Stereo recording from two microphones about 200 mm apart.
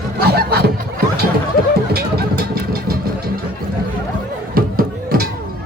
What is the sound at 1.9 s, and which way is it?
Vehicle, 50° right (ahead or behind).